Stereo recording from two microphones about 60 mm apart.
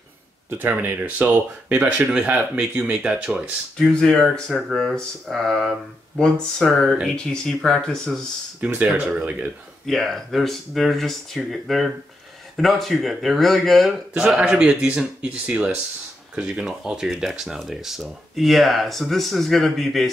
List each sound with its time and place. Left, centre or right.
0.7 s a man's voice: right
3.7 s speech: centre
4.5 s a man's voice: centre
4.7 s speech: centre
8.5 s speech: right
9.8 s speech: centre
14.1 s a man's voice: centre